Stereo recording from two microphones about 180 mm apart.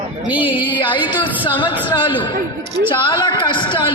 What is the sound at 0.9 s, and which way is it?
A man's voice, 25° left (ahead or behind).